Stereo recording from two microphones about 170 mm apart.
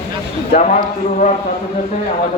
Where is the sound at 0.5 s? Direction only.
45° left (ahead or behind).